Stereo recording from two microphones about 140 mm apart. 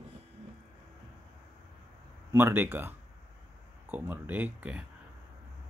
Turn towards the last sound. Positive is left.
turn(degrees=-10)  # may be behind; listen again after turning